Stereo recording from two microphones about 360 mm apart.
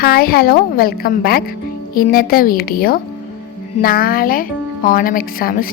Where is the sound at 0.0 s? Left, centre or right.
Left.